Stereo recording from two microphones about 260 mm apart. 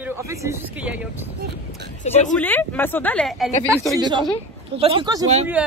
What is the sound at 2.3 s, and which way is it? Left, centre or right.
Speech, centre.